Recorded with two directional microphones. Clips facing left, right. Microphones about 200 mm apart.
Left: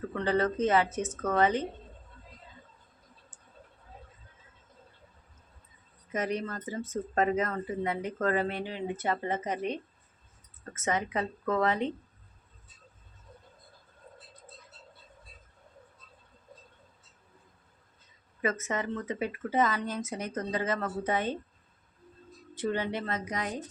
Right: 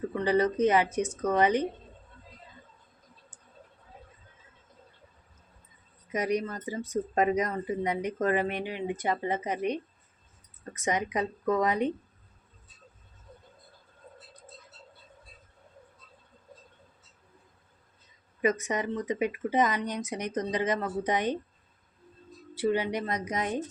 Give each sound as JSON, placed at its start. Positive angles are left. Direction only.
{"t": 0.1, "sound": "speech", "side_deg": -15}
{"t": 6.1, "sound": "speech", "side_deg": -15}
{"t": 18.4, "sound": "speech", "side_deg": -15}
{"t": 22.5, "sound": "speech", "side_deg": -10}